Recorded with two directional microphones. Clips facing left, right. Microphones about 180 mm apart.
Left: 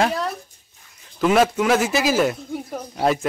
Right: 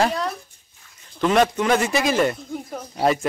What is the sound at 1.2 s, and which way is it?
Speech, 5° left (ahead or behind).